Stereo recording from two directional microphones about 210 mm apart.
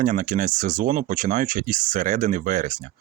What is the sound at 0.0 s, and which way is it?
Speech, 40° right (ahead or behind).